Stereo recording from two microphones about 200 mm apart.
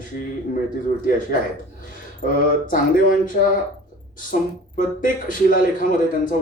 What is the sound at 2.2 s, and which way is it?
Speech, 45° left (ahead or behind).